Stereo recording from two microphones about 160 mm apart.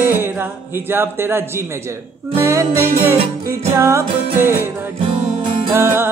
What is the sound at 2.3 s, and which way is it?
Music, 20° right (ahead or behind).